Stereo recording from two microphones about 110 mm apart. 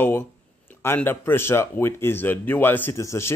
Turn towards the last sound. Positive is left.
turn(degrees=25)  # may be behind; listen again after turning